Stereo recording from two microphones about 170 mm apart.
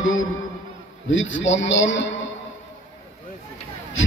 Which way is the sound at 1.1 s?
90° left.